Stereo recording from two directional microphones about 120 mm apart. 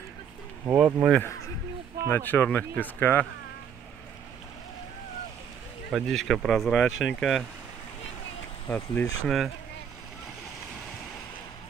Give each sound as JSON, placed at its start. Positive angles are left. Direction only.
{"t": 0.7, "sound": "speech", "side_deg": -10}
{"t": 2.0, "sound": "speech", "side_deg": 15}
{"t": 5.9, "sound": "speech", "side_deg": 0}
{"t": 8.6, "sound": "speech", "side_deg": 15}